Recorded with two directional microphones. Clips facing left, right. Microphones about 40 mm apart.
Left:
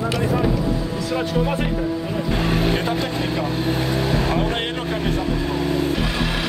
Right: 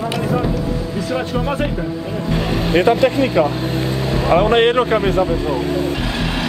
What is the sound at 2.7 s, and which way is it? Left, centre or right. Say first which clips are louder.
Speech: right 9 dB; right.